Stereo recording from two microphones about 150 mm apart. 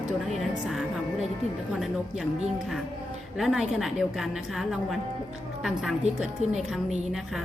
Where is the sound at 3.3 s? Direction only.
Centre (ahead or behind).